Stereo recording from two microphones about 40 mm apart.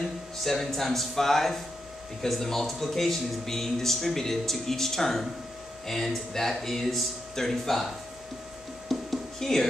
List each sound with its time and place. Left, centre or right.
0.4 s speech: centre
8.8 s music: centre